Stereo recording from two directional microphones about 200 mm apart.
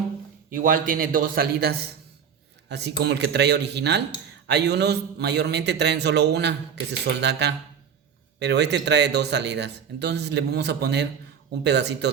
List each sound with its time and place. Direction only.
0.5 s a man's voice: 45° right (ahead or behind)